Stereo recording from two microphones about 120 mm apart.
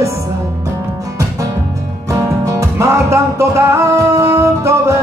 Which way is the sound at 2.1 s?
25° right (ahead or behind).